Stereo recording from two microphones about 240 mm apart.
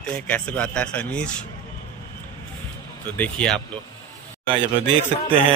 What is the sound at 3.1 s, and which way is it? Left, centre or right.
Speech, centre.